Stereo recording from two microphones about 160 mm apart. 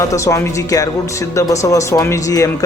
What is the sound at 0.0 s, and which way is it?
Speech, 20° left (ahead or behind).